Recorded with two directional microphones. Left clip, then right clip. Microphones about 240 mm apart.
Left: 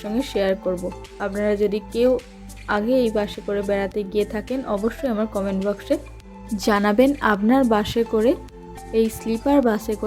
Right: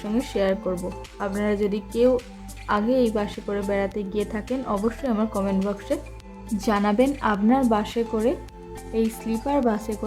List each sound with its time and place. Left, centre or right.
0.0 s a woman's voice: centre